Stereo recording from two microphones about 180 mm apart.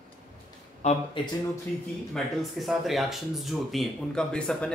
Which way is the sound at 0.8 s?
40° left (ahead or behind).